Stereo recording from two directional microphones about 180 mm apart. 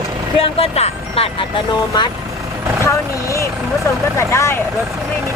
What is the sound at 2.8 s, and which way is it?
Speech, 15° left (ahead or behind).